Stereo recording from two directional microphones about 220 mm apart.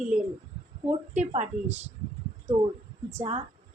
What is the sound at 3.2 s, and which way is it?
Speech, 30° right (ahead or behind).